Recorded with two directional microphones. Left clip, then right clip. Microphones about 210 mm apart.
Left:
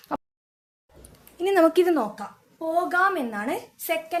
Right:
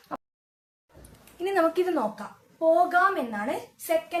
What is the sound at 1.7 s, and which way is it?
A woman's voice, 55° left (ahead or behind).